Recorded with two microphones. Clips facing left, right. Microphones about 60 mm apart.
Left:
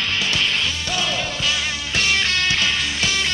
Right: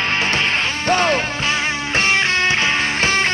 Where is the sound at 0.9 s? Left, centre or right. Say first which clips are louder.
Right 12 dB; right.